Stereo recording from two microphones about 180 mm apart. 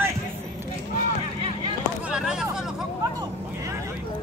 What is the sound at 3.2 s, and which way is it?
Vehicle, 15° right (ahead or behind).